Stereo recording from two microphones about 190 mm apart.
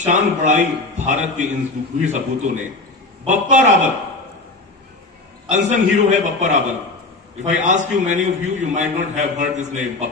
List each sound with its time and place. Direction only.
0.0 s a man's voice: 40° right (ahead or behind)
5.5 s a man's voice: 40° right (ahead or behind)